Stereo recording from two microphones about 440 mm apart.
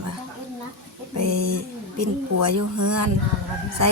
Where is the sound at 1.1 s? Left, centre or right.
Right.